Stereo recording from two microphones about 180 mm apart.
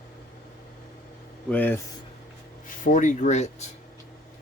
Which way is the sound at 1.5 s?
10° left (ahead or behind).